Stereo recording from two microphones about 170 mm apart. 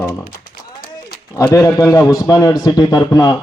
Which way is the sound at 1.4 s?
20° left (ahead or behind).